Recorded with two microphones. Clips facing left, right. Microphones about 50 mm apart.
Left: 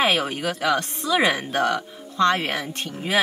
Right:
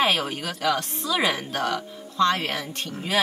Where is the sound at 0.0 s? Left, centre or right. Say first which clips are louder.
Left 2 dB; centre.